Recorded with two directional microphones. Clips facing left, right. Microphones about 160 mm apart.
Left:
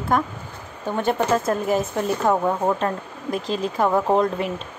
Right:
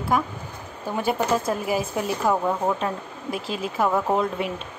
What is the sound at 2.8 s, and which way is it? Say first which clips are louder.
A woman's voice: left 3 dB; 5° right (ahead or behind).